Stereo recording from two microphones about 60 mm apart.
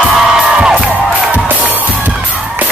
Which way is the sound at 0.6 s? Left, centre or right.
Centre.